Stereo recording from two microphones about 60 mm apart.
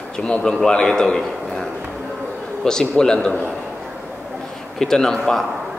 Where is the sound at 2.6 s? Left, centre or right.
Centre.